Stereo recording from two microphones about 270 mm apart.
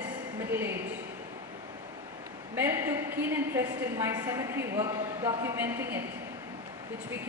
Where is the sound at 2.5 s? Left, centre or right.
Centre.